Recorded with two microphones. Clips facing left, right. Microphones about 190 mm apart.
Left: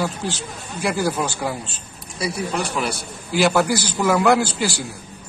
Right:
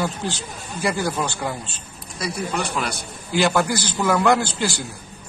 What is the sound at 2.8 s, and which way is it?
A man's voice, 5° left (ahead or behind).